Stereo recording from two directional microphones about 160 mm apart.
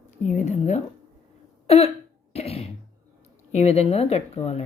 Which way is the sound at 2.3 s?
40° left (ahead or behind).